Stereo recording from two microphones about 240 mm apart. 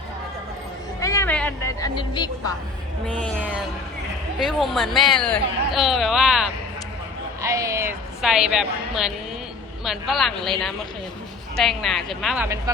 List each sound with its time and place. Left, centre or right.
1.0 s a sound: centre
3.1 s speech: centre
7.4 s a woman's voice: centre
12.7 s speech: centre